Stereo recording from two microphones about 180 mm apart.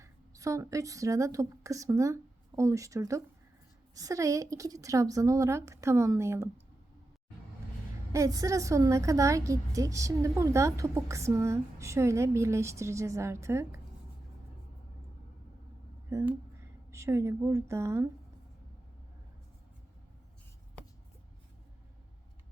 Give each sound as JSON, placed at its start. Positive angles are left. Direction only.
{"t": 0.0, "sound": "a woman's voice", "side_deg": -15}
{"t": 8.1, "sound": "a woman's voice", "side_deg": -20}
{"t": 16.0, "sound": "a woman's voice", "side_deg": -15}